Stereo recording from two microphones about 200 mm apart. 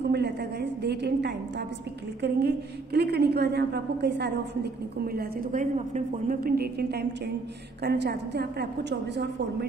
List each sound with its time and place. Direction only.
0.0 s a woman's voice: 55° right (ahead or behind)